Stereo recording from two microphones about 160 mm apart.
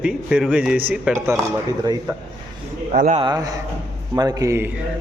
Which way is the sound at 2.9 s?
50° right (ahead or behind).